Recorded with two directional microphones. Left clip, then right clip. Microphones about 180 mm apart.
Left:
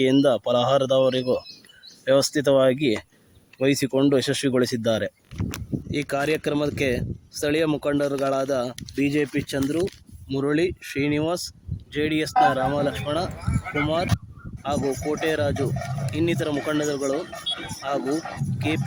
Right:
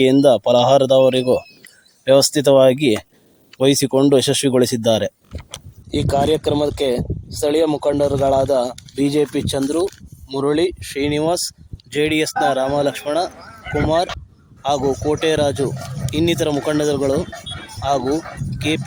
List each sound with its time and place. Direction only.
0.0 s speech: 25° right (ahead or behind)
17.5 s music: 70° left (ahead or behind)
17.8 s speech: 20° right (ahead or behind)